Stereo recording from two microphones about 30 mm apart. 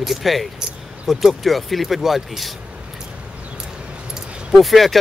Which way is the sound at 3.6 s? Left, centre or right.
Right.